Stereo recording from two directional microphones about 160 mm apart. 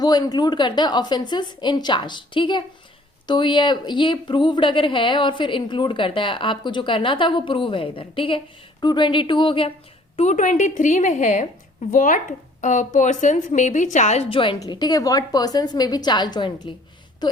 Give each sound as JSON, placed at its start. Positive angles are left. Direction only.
{"t": 0.0, "sound": "a woman's voice", "side_deg": 25}
{"t": 10.2, "sound": "a woman's voice", "side_deg": 50}